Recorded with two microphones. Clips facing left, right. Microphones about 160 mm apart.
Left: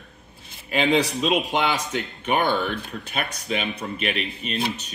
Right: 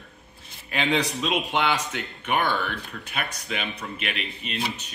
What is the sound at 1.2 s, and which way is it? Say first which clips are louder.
Speech: left 3 dB; 20° left (ahead or behind).